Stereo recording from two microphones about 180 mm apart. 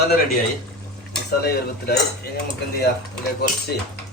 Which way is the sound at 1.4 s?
60° left (ahead or behind).